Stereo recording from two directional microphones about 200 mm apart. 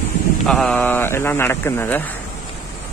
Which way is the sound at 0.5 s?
5° left (ahead or behind).